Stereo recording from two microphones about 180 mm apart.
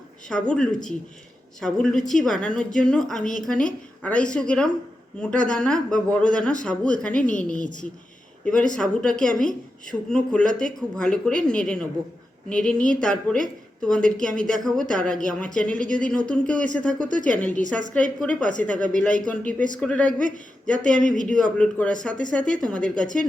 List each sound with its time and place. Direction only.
0.3 s a woman's voice: 5° left (ahead or behind)
21.0 s speech: 45° left (ahead or behind)
21.2 s a woman's voice: 5° left (ahead or behind)